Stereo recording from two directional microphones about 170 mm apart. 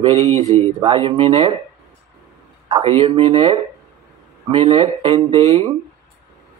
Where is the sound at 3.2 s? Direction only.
35° right (ahead or behind).